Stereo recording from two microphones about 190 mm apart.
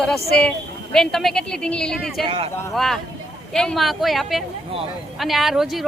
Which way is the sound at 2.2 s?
25° right (ahead or behind).